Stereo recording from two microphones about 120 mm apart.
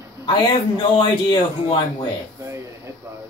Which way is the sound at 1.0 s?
40° left (ahead or behind).